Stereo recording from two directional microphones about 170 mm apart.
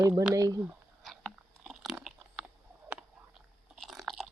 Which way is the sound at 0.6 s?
Centre (ahead or behind).